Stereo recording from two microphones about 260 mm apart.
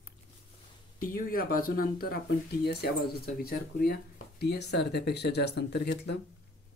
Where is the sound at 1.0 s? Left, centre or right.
Left.